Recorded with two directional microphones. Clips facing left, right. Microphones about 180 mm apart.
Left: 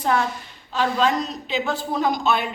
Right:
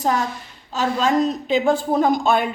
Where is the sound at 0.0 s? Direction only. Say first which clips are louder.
Right 1 dB; 40° right (ahead or behind).